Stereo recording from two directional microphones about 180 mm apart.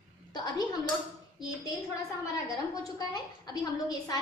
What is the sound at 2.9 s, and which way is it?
A woman's voice, 20° left (ahead or behind).